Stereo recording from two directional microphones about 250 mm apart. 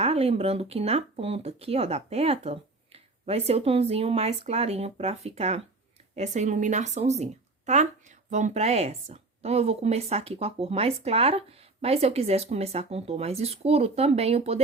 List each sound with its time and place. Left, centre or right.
0.0 s speech: right